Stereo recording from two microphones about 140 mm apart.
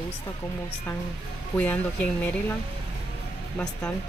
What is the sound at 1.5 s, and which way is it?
Speech, 10° left (ahead or behind).